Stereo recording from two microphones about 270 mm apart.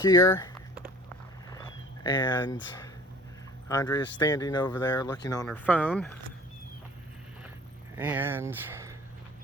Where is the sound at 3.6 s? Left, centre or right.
Centre.